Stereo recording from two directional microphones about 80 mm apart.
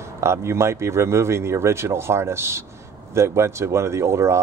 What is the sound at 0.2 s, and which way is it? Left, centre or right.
Speech, right.